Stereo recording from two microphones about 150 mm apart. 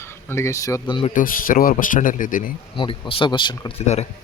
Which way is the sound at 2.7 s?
35° left (ahead or behind).